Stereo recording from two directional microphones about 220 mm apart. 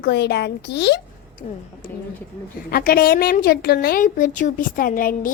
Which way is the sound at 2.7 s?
40° left (ahead or behind).